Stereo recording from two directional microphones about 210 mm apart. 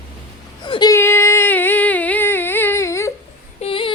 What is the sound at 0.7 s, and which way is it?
Female singing, 20° left (ahead or behind).